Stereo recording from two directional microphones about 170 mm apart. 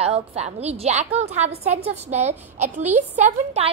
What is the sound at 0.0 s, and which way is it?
A woman's voice, 35° right (ahead or behind).